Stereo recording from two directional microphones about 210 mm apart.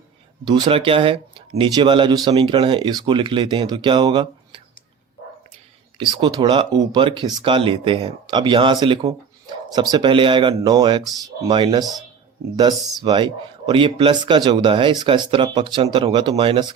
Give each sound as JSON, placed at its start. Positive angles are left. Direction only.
{"t": 0.4, "sound": "speech", "side_deg": -20}
{"t": 6.0, "sound": "speech", "side_deg": -20}